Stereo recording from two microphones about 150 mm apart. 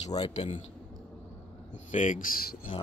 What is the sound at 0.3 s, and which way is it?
Speech, 50° left (ahead or behind).